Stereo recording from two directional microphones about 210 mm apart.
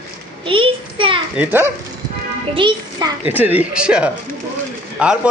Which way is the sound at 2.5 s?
25° right (ahead or behind).